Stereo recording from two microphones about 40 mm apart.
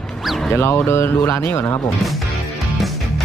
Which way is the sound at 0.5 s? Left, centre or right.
Left.